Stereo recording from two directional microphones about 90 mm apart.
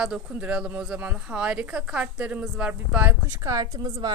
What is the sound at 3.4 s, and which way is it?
Speech, 40° right (ahead or behind).